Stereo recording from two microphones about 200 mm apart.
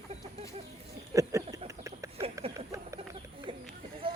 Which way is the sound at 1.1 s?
15° right (ahead or behind).